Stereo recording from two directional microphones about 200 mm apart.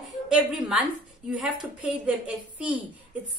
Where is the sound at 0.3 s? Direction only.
5° right (ahead or behind).